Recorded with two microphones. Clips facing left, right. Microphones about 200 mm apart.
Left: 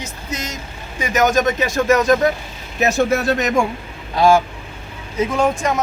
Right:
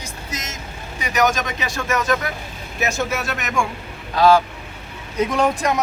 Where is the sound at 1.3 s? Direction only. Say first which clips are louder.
Left 9 dB; 45° left (ahead or behind).